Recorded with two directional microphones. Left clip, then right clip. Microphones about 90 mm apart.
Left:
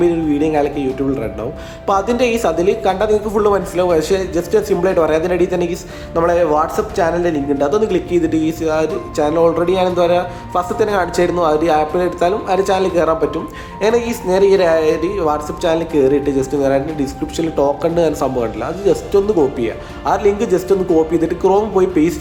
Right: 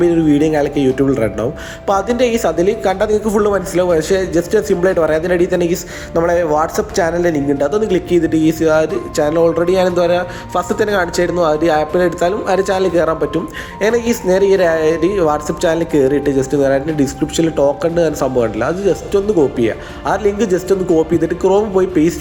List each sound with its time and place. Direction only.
0.0 s a woman's voice: 35° right (ahead or behind)
1.9 s a woman's voice: 35° right (ahead or behind)
17.9 s speech: 25° right (ahead or behind)
20.8 s speech: centre (ahead or behind)
21.1 s speech: 25° right (ahead or behind)